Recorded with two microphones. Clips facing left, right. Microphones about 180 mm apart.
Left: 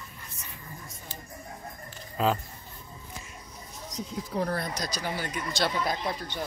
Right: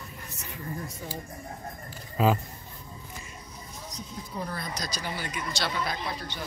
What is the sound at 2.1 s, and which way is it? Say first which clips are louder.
Speech: right 2 dB; centre (ahead or behind).